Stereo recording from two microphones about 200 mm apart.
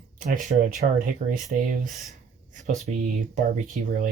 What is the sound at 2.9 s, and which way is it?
Speech, 35° right (ahead or behind).